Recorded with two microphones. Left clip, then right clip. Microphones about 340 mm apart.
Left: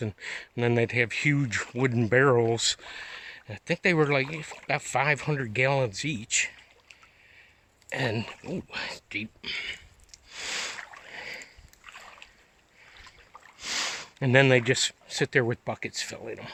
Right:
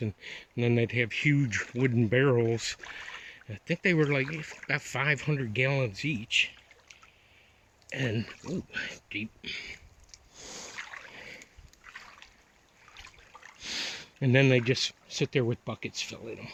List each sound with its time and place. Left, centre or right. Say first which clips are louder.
0.0 s speech: left 4 dB; centre
7.9 s speech: left 4 dB; centre
8.7 s a sound: left 3 dB; centre
13.6 s a sound: left 5 dB; centre
15.4 s speech: left 6 dB; left
15.8 s speech: left 2 dB; centre
16.1 s speech: left 3 dB; left